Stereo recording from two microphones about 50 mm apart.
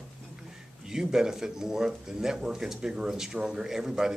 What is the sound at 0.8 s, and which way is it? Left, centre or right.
Speech, centre.